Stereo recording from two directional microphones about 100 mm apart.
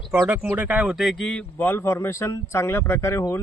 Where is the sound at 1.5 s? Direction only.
20° left (ahead or behind).